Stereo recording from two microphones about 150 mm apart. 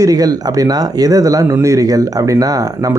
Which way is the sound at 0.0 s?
25° right (ahead or behind).